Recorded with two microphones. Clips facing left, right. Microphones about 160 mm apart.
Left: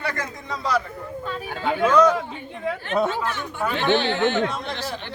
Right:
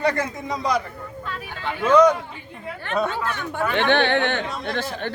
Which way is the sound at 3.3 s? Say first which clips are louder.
Right 3 dB; 55° right (ahead or behind).